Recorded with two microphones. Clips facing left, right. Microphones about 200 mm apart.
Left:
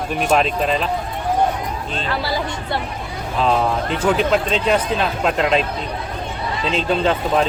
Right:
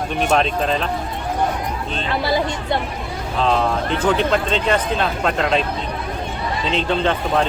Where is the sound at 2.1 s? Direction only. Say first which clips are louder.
Right 4 dB; 20° right (ahead or behind).